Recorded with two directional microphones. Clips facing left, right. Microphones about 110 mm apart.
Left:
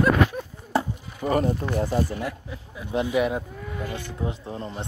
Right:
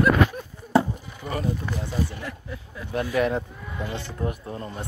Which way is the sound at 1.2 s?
40° left (ahead or behind).